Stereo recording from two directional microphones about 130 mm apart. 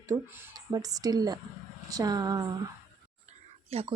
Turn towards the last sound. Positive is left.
turn(degrees=-50)  # may be behind; listen again after turning